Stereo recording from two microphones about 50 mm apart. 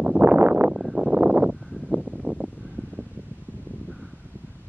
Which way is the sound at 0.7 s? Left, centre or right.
Centre.